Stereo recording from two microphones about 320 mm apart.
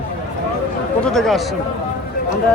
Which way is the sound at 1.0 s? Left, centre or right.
Centre.